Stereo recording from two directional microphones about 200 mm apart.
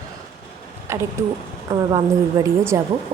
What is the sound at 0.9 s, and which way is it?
Speech, 15° right (ahead or behind).